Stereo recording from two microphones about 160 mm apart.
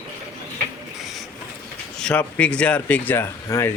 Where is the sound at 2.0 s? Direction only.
5° left (ahead or behind).